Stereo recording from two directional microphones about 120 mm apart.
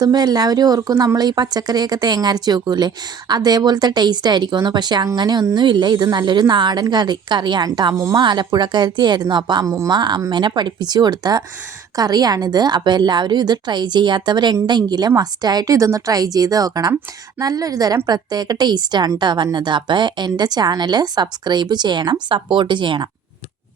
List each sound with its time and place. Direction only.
0.0 s speech: 35° right (ahead or behind)
9.6 s speech: 25° right (ahead or behind)
9.9 s speech: 40° right (ahead or behind)